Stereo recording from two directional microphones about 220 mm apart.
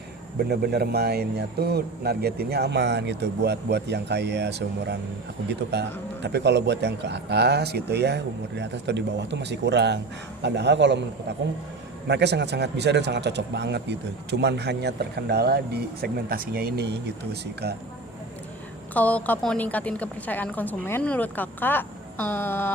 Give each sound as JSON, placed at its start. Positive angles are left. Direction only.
{"t": 0.3, "sound": "speech", "side_deg": -45}
{"t": 6.2, "sound": "speech", "side_deg": -50}
{"t": 12.0, "sound": "speech", "side_deg": -50}
{"t": 18.9, "sound": "a woman's voice", "side_deg": 5}